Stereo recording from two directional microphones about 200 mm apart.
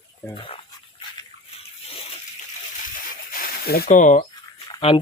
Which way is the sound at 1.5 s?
30° left (ahead or behind).